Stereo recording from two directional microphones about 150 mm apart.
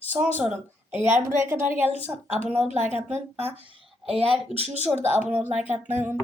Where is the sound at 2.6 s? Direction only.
50° right (ahead or behind).